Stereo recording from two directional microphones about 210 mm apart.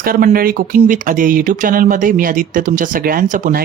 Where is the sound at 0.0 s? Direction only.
40° right (ahead or behind).